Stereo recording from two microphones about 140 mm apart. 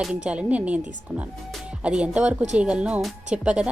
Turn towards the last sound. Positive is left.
turn(degrees=-5)  # may be behind; listen again after turning